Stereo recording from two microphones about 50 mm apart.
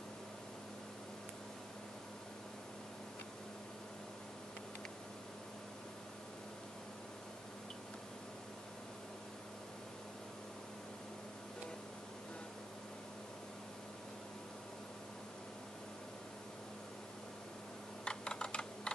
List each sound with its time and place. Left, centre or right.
18.0 s computer keyboard: centre